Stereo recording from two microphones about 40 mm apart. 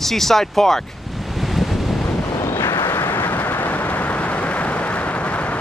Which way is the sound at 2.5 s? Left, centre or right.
Left.